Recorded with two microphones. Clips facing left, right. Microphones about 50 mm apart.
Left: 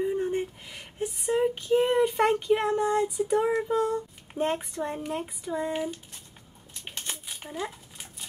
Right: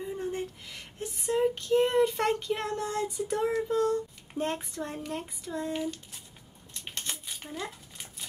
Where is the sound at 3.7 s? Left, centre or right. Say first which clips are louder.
Left 1 dB; centre.